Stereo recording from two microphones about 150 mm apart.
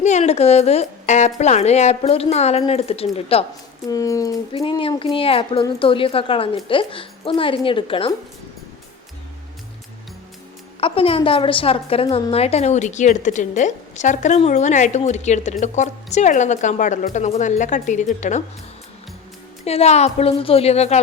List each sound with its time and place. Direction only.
0.0 s a woman's voice: 50° left (ahead or behind)
3.8 s speech: 20° left (ahead or behind)
4.5 s a woman's voice: 35° left (ahead or behind)
10.8 s a woman's voice: 40° left (ahead or behind); by 18.4 s 55° left (ahead or behind)
19.6 s a woman's voice: 45° left (ahead or behind)